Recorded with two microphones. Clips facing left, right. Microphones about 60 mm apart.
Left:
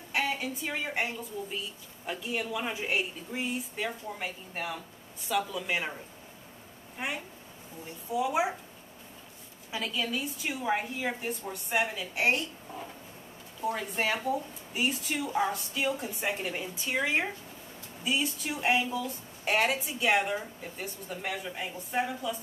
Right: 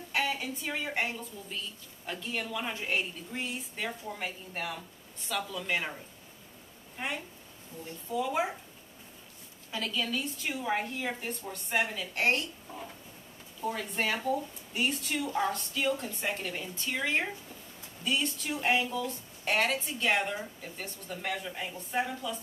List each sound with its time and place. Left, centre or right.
0.1 s a woman's voice: centre
7.0 s a woman's voice: centre
9.7 s a woman's voice: centre